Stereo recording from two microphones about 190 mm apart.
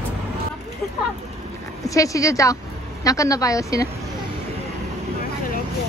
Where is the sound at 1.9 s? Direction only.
15° left (ahead or behind).